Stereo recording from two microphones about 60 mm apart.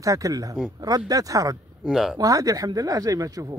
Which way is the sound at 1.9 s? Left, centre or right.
Centre.